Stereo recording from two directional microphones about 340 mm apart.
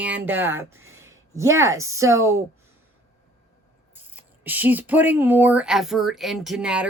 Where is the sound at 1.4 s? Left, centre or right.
Centre.